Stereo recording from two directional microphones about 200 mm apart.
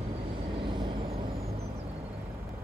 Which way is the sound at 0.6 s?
25° right (ahead or behind).